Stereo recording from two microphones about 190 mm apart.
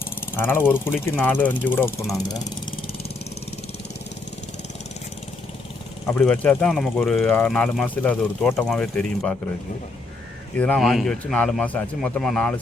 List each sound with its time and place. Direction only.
0.3 s speech: 10° left (ahead or behind)
6.1 s speech: 10° left (ahead or behind)
7.3 s speech: 10° left (ahead or behind)
10.6 s speech: 5° left (ahead or behind)